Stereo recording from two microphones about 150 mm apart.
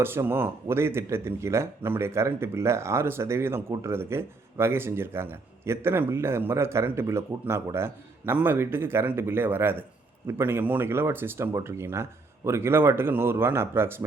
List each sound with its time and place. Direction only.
0.0 s speech: 15° right (ahead or behind)